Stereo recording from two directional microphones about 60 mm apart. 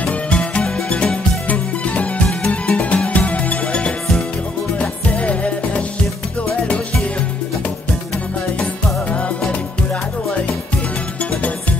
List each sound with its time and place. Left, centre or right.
0.0 s music: centre
8.5 s music: centre